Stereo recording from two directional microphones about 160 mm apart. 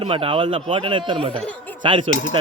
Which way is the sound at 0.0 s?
35° right (ahead or behind).